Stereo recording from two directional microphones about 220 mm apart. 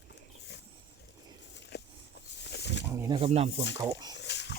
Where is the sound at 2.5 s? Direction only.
50° left (ahead or behind).